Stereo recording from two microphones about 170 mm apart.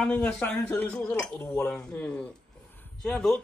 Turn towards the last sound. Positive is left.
turn(degrees=5)  # may be behind; listen again after turning